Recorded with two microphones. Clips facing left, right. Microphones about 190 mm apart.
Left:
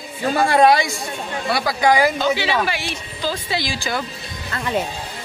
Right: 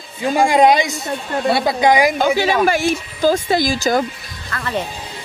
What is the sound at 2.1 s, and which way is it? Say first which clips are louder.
A woman's voice: right 4 dB; 45° right (ahead or behind).